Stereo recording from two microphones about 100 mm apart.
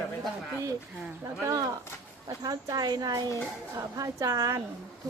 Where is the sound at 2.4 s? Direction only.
40° right (ahead or behind).